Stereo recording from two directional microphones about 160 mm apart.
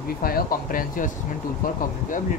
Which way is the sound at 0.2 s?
65° left (ahead or behind).